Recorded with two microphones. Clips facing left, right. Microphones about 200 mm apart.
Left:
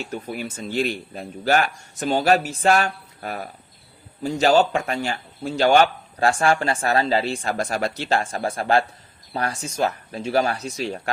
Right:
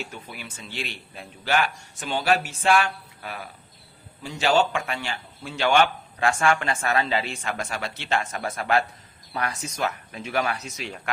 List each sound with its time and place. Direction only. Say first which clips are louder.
0.0 s speech: left 8 dB; 45° left (ahead or behind)